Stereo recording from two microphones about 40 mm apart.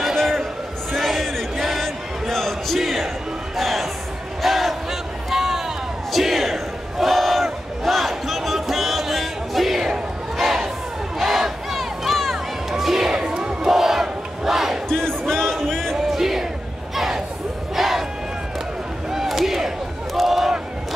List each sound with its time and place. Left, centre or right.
0.9 s music: centre
2.8 s crowd: centre
3.5 s music: centre
4.4 s crowd: centre
5.3 s a sound: centre
6.1 s battle cry: centre
11.1 s crowd: centre
13.1 s crowd: centre
13.7 s battle cry: centre
14.9 s music: centre
16.1 s crowd: centre
16.9 s a sound: centre
17.7 s crowd: centre
19.2 s a sound: centre